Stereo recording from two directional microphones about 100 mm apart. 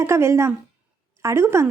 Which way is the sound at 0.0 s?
30° right (ahead or behind).